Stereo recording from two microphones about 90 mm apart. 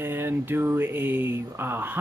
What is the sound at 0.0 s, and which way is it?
Speech, 25° right (ahead or behind).